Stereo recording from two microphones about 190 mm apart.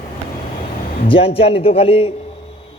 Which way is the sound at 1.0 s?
30° left (ahead or behind).